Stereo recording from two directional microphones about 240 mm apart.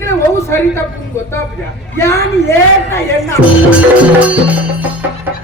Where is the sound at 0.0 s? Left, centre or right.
Centre.